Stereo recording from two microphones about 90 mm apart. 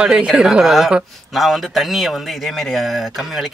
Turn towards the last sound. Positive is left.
turn(degrees=0)  # may be behind; listen again after turning